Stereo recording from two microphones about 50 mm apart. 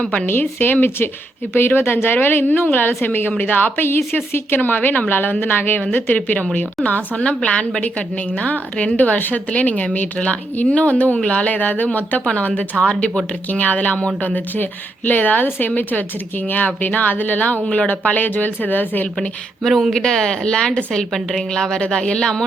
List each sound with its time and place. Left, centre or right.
0.0 s speech: centre
0.3 s a woman's voice: left
12.2 s a woman's voice: left
19.9 s a woman's voice: centre